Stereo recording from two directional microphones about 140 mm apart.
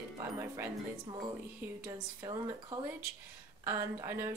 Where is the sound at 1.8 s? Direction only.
25° right (ahead or behind).